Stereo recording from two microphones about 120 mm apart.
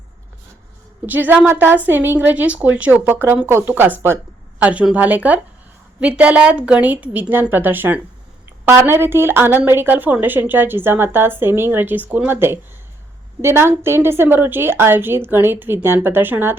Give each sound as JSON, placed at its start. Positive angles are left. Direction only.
{"t": 1.0, "sound": "a woman's voice", "side_deg": -15}